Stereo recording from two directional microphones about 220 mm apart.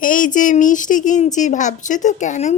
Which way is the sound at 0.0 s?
35° left (ahead or behind).